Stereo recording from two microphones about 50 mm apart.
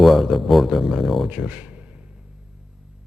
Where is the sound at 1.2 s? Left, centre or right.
Right.